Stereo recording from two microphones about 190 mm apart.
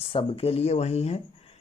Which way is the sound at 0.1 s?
30° left (ahead or behind).